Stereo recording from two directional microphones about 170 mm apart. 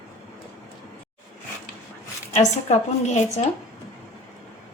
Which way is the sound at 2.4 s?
40° left (ahead or behind).